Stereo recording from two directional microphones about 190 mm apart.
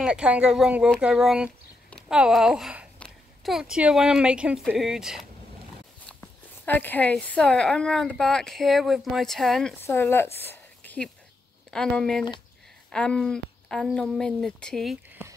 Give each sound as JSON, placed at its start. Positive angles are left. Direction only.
{"t": 0.0, "sound": "a child's voice", "side_deg": -5}
{"t": 6.2, "sound": "a woman's voice", "side_deg": 10}